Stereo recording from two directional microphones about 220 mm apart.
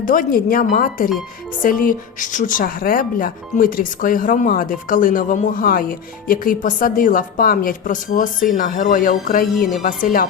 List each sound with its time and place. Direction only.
0.0 s speech: 40° left (ahead or behind)
9.6 s a woman's voice: centre (ahead or behind)
9.8 s speech: 40° left (ahead or behind)